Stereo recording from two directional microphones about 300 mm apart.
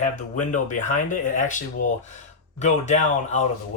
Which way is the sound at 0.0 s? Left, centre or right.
Left.